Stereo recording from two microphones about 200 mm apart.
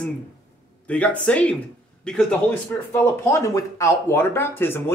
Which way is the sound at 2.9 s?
15° left (ahead or behind).